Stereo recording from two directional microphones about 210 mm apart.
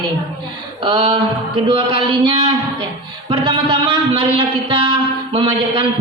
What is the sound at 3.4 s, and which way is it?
Speech, 25° right (ahead or behind).